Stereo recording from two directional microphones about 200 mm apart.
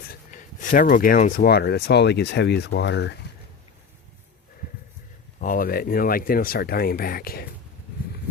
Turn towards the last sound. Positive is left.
turn(degrees=50)  # may be behind; listen again after turning